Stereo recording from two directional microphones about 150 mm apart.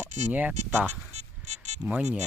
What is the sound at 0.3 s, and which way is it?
Speech, 10° right (ahead or behind).